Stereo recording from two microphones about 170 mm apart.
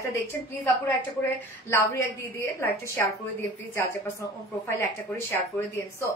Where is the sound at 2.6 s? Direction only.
10° left (ahead or behind).